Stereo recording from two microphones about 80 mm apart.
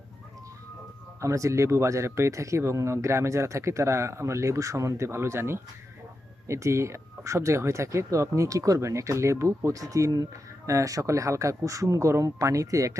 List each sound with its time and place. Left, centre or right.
1.2 s speech: right